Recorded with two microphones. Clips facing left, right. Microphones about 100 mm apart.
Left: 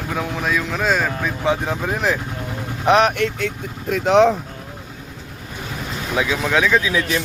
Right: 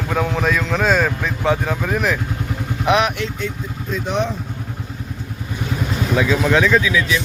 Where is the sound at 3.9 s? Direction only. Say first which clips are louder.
Left 8 dB; 90° left.